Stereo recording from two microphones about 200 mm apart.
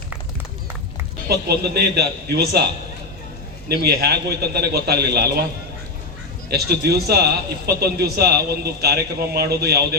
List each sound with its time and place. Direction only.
1.3 s a man's voice: 50° right (ahead or behind)
3.7 s a man's voice: 50° right (ahead or behind)
6.5 s a man's voice: 55° right (ahead or behind)